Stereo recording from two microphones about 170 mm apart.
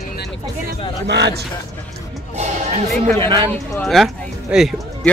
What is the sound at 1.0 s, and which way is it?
Speech, 85° right.